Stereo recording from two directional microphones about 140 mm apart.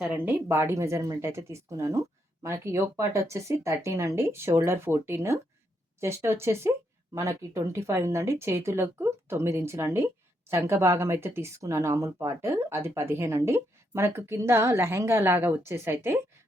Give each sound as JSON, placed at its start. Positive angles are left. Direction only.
{"t": 0.0, "sound": "speech", "side_deg": -5}